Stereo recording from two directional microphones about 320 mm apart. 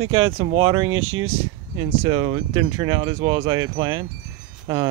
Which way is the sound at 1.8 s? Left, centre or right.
Centre.